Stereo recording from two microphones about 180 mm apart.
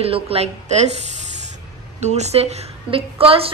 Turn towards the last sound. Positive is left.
turn(degrees=-30)  # may be behind; listen again after turning